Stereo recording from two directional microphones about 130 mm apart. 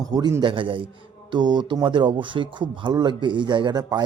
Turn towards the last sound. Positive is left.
turn(degrees=-35)  # may be behind; listen again after turning